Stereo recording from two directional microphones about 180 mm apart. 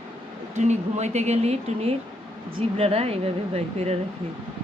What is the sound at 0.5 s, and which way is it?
Speech, 40° right (ahead or behind).